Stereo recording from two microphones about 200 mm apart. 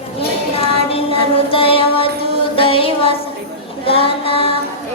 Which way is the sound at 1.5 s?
25° left (ahead or behind).